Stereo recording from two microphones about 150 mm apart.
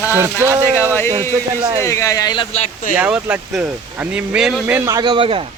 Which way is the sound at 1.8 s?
20° left (ahead or behind).